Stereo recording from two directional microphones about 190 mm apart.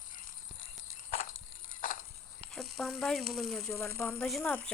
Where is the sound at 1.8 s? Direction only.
45° left (ahead or behind).